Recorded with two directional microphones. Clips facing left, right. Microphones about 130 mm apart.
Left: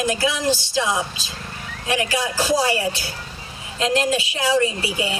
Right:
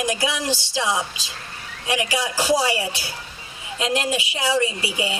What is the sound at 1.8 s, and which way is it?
A woman's voice, 15° right (ahead or behind).